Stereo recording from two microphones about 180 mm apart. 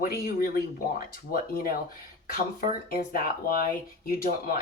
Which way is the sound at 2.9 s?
50° left (ahead or behind).